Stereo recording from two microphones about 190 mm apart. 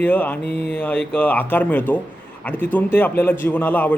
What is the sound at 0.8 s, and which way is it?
A man's voice, 10° left (ahead or behind).